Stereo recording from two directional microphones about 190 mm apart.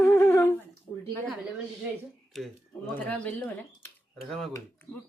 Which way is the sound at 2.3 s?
Centre (ahead or behind).